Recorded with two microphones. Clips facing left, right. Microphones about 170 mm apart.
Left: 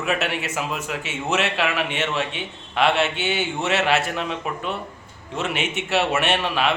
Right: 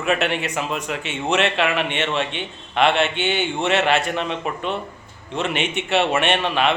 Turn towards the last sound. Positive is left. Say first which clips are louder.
# right 2 dB
turn(degrees=5)  # may be behind; listen again after turning